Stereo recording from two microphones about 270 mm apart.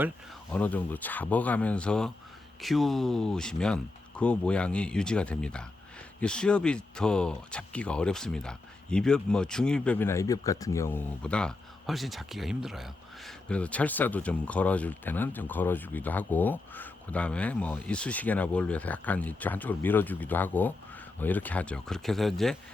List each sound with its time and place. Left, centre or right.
0.5 s speech: centre